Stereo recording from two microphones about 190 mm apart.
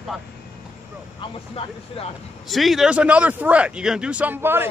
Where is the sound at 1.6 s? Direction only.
30° left (ahead or behind).